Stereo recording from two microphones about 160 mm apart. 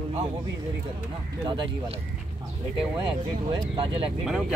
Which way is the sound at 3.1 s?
30° right (ahead or behind).